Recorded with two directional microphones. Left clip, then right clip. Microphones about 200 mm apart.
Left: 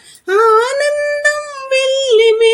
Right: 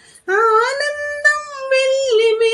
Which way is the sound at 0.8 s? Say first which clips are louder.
Left 4 dB; 35° left (ahead or behind).